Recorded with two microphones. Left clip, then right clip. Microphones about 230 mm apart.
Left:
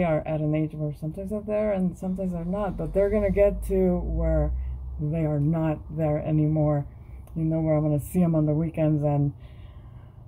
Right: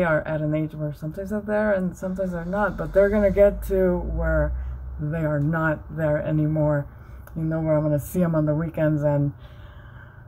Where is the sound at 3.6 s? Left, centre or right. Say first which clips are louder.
Right 3 dB; right.